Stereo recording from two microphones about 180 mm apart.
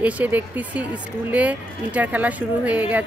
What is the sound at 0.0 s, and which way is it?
Speech, 10° right (ahead or behind).